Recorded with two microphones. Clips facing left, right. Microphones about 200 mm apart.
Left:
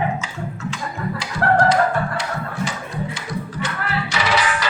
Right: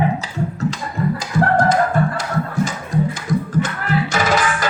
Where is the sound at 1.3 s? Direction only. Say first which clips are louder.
Even; 45° right (ahead or behind).